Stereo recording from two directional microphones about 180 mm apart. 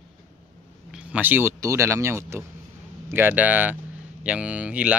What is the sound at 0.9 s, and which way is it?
A man's voice, 10° right (ahead or behind).